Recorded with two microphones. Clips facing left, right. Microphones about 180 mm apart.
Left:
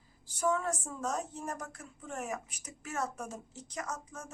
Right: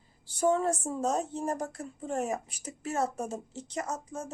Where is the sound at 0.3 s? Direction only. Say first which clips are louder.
Right 5 dB; 30° right (ahead or behind).